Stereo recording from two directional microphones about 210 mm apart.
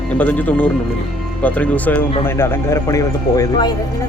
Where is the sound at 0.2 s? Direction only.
10° left (ahead or behind).